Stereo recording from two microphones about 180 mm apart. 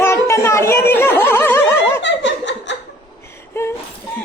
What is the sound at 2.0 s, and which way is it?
Laughter, 90° left.